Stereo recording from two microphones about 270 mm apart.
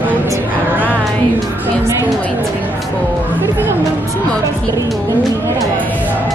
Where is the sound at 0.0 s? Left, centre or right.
Centre.